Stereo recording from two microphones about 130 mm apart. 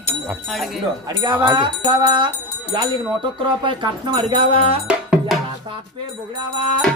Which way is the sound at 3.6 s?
35° right (ahead or behind).